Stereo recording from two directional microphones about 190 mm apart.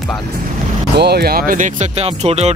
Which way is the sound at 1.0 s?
60° right (ahead or behind).